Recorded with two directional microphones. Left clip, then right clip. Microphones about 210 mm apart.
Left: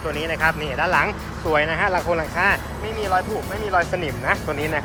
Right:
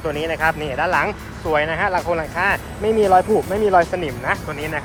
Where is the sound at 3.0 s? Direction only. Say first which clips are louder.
Right 7 dB; 15° right (ahead or behind).